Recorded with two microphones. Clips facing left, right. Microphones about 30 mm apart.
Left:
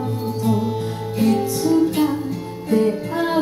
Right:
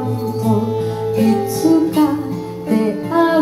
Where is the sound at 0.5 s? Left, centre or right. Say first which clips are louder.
Right 5 dB; centre.